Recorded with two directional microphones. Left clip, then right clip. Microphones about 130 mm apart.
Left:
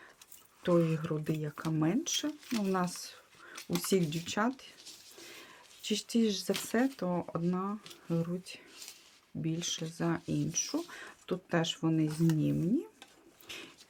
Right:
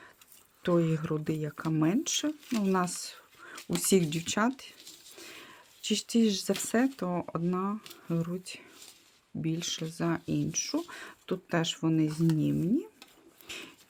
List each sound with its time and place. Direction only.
0.6 s speech: 35° right (ahead or behind)
5.1 s a sound: 40° right (ahead or behind)
6.7 s speech: 40° right (ahead or behind)
13.5 s bird: 35° right (ahead or behind)